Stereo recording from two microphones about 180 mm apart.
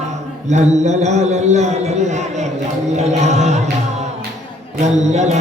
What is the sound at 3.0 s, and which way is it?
Music, 40° right (ahead or behind).